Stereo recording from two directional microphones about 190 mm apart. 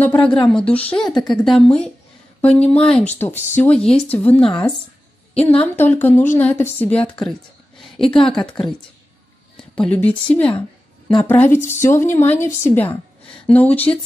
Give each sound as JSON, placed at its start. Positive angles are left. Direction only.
{"t": 0.0, "sound": "speech", "side_deg": 5}
{"t": 5.5, "sound": "speech", "side_deg": 10}
{"t": 7.8, "sound": "a sound", "side_deg": 0}
{"t": 8.3, "sound": "speech", "side_deg": 5}
{"t": 9.8, "sound": "speech", "side_deg": 5}